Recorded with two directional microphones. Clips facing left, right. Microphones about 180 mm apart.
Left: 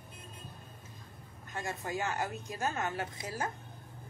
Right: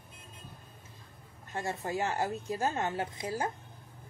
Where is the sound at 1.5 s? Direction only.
30° right (ahead or behind).